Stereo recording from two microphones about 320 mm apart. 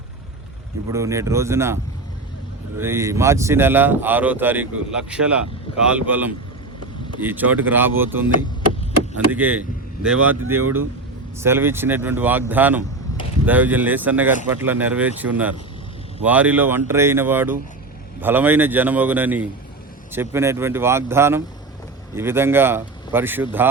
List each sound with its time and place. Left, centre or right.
0.9 s speech: centre
10.4 s speech: right
11.3 s speech: centre